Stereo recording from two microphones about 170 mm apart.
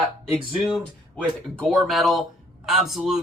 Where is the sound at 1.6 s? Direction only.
Centre (ahead or behind).